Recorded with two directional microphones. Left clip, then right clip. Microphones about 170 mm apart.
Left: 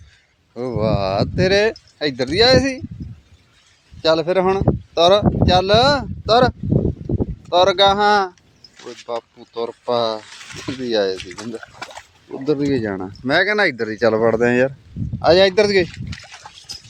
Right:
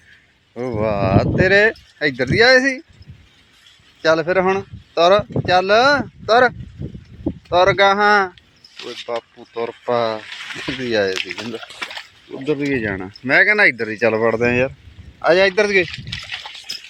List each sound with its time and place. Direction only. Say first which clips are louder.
0.5 s speech: even; centre (ahead or behind)
4.0 s speech: even; 15° left (ahead or behind)
7.5 s speech: even; 10° left (ahead or behind)
10.2 s a sound: right 5 dB; 15° right (ahead or behind)
10.8 s speech: even; 10° left (ahead or behind)
12.5 s speech: left 1 dB; 30° left (ahead or behind)
14.3 s speech: left 1 dB; 35° left (ahead or behind)